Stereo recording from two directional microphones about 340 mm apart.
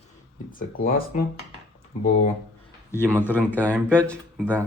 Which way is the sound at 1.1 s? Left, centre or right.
Left.